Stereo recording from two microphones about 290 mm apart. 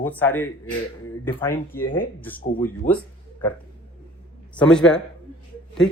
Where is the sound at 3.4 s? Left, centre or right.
Centre.